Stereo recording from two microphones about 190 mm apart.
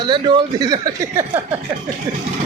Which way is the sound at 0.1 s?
20° right (ahead or behind).